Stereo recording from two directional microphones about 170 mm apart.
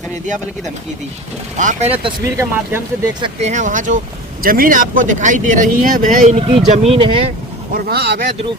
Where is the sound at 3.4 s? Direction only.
45° right (ahead or behind).